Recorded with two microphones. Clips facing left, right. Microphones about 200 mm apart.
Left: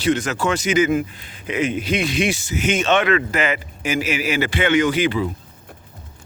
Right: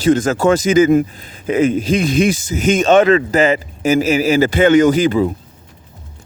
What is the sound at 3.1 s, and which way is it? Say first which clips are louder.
A man's voice: right 7 dB; 35° right (ahead or behind).